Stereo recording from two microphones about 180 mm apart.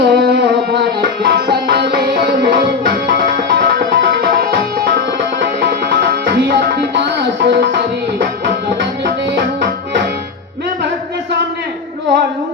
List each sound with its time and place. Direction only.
0.0 s music: 65° right (ahead or behind)
3.1 s music: 75° right (ahead or behind)